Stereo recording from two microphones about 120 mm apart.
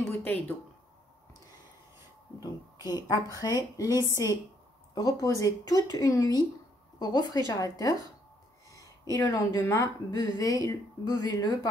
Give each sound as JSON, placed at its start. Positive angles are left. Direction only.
{"t": 0.1, "sound": "speech", "side_deg": 15}
{"t": 2.4, "sound": "speech", "side_deg": 30}
{"t": 3.9, "sound": "speech", "side_deg": -25}
{"t": 4.9, "sound": "speech", "side_deg": 30}
{"t": 8.7, "sound": "a sound", "side_deg": 30}
{"t": 9.7, "sound": "speech", "side_deg": 30}